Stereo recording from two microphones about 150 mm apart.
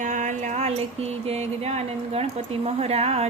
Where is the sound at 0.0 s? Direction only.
55° right (ahead or behind).